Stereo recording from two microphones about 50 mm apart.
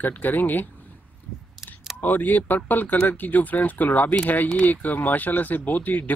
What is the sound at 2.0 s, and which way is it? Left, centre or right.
Speech, left.